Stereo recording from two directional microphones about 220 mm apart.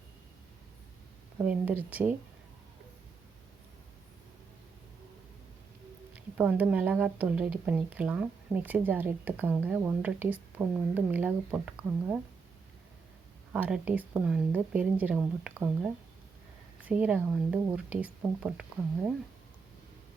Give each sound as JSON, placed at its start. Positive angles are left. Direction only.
{"t": 1.4, "sound": "speech", "side_deg": -10}
{"t": 6.1, "sound": "speech", "side_deg": -5}
{"t": 13.5, "sound": "speech", "side_deg": -5}